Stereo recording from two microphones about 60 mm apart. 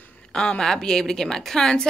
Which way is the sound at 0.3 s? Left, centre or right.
Centre.